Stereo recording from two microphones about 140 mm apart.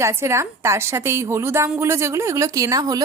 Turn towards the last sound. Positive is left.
turn(degrees=-25)  # may be behind; listen again after turning